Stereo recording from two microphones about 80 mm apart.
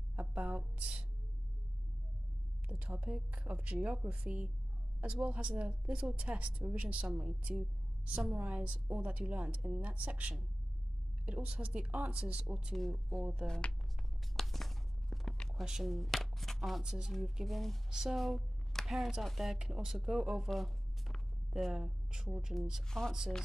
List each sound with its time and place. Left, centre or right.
0.1 s a sound: centre
2.7 s a woman's voice: centre
12.7 s speech: centre
13.5 s speech: centre
14.3 s a sound: centre
15.6 s speech: centre
22.8 s speech: centre